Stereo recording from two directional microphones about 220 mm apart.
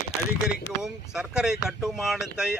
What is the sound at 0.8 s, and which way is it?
Speech, 5° right (ahead or behind).